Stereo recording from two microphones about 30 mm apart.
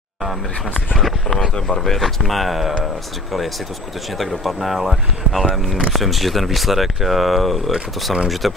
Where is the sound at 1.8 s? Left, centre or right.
Centre.